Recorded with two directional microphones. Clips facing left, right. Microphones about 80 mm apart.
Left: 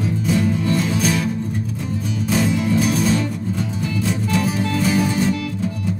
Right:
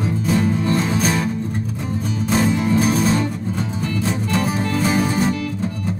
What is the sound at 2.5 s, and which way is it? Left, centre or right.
Music, right.